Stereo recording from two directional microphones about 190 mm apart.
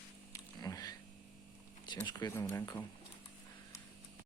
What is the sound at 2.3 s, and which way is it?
Speech, 15° left (ahead or behind).